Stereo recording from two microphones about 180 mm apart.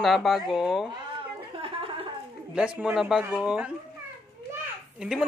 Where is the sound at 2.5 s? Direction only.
5° right (ahead or behind).